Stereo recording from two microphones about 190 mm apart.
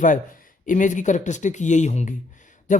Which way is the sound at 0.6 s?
40° left (ahead or behind).